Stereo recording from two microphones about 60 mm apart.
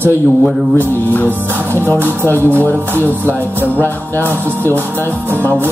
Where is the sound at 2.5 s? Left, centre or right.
Left.